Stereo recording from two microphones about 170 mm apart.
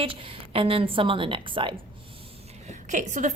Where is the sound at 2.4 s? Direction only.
40° right (ahead or behind).